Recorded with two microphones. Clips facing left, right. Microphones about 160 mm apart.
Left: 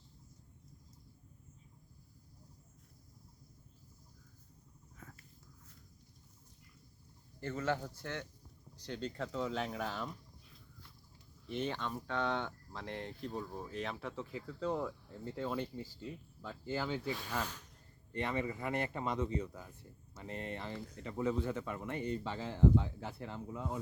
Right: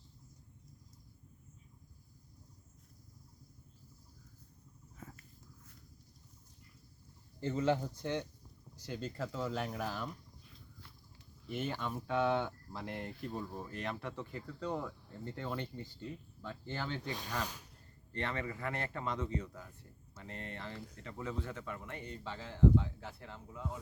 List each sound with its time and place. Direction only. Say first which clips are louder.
7.3 s speech: right 4 dB; 20° right (ahead or behind)
8.8 s speech: even; 5° right (ahead or behind)
11.4 s speech: even; 5° right (ahead or behind)
17.2 s speech: even; 15° right (ahead or behind)
18.1 s a man's voice: left 2 dB; 15° left (ahead or behind)